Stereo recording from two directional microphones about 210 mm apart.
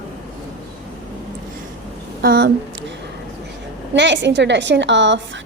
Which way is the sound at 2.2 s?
50° right (ahead or behind).